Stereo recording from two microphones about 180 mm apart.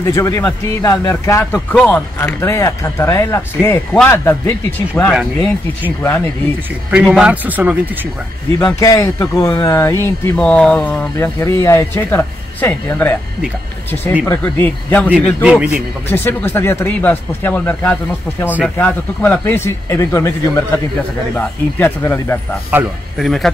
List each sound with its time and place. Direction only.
0.0 s speech: 15° left (ahead or behind)
5.1 s speech: 5° right (ahead or behind)
5.9 s speech: 10° left (ahead or behind)
6.9 s a man's voice: 5° right (ahead or behind)
8.7 s speech: 20° left (ahead or behind)
14.2 s speech: 10° left (ahead or behind)
15.2 s speech: 5° right (ahead or behind)
16.1 s speech: 10° left (ahead or behind)
23.1 s speech: centre (ahead or behind)